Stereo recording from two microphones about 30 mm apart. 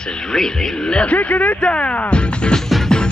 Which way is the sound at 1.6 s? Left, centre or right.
Left.